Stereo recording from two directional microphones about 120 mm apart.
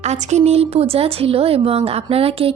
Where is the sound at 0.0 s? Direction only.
70° right (ahead or behind).